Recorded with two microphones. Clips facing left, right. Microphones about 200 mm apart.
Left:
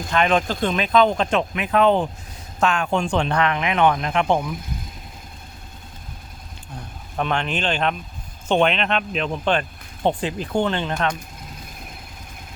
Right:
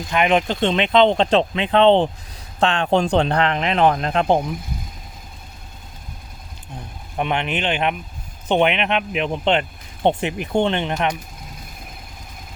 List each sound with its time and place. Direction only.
0.1 s speech: 15° right (ahead or behind); by 4.5 s 35° right (ahead or behind)
7.2 s speech: 15° right (ahead or behind)